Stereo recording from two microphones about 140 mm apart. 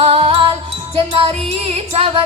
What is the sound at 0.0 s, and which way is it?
Jingle bell, 40° right (ahead or behind).